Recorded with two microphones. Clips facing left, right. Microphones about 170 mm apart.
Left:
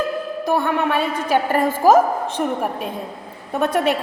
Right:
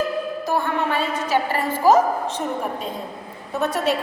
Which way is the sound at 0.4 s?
60° left (ahead or behind).